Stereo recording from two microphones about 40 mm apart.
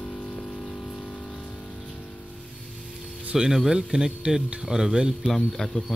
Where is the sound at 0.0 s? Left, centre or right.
Left.